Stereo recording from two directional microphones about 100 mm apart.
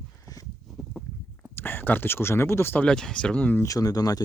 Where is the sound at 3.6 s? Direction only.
35° left (ahead or behind).